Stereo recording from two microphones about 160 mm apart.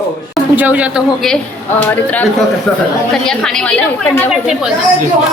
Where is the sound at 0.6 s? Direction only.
10° right (ahead or behind).